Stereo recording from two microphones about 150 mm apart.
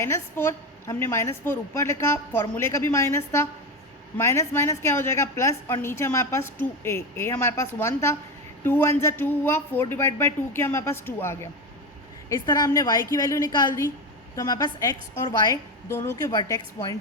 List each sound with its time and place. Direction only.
0.0 s a woman's voice: 15° left (ahead or behind)
15.9 s a woman's voice: 20° left (ahead or behind)